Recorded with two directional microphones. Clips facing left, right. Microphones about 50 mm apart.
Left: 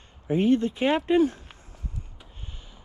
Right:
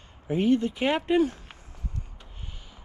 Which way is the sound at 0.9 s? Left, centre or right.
Right.